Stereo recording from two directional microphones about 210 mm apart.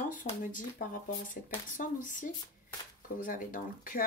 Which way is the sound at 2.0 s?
40° left (ahead or behind).